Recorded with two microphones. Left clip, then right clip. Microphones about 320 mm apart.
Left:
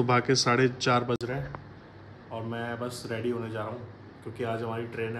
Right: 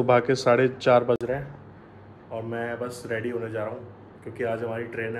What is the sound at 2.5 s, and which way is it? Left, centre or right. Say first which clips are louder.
A man's voice: right 4 dB; centre.